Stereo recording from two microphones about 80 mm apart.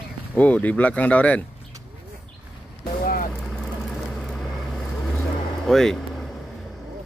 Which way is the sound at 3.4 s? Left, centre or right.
Centre.